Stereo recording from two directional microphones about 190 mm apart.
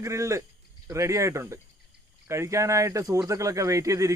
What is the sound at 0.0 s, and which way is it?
Speech, 15° right (ahead or behind).